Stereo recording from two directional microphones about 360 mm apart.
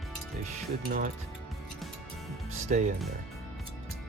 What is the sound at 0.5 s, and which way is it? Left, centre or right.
Speech, right.